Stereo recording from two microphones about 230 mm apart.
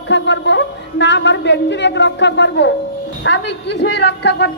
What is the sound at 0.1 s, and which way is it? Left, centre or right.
A man's voice, left.